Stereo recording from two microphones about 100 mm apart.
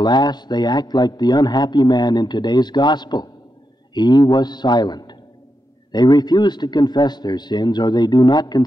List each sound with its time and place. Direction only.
0.0 s a man's voice: 45° left (ahead or behind)